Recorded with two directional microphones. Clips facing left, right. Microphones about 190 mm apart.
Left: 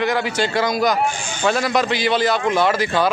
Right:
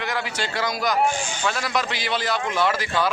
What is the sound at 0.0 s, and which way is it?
A man's voice, 20° left (ahead or behind).